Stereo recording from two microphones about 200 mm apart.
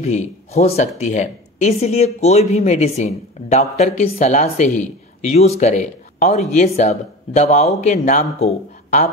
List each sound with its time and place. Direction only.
0.0 s speech: 35° left (ahead or behind)